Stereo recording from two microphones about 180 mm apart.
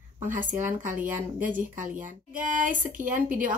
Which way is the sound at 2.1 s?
45° right (ahead or behind).